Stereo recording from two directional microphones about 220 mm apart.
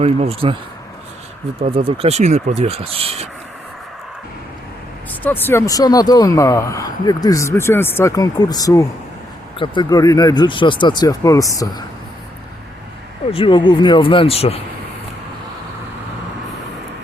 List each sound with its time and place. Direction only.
0.0 s speech: 25° right (ahead or behind)
1.5 s speech: 25° right (ahead or behind)
5.2 s speech: 10° left (ahead or behind)
13.3 s speech: 20° left (ahead or behind)